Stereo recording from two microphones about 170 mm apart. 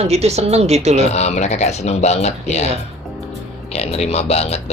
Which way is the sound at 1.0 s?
40° left (ahead or behind).